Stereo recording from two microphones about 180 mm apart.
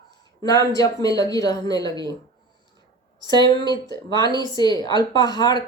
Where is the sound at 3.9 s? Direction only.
20° left (ahead or behind).